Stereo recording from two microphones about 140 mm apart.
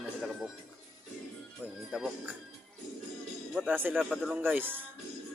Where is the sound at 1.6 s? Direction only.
15° right (ahead or behind).